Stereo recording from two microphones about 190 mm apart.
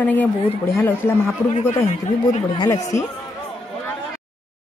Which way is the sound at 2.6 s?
15° left (ahead or behind).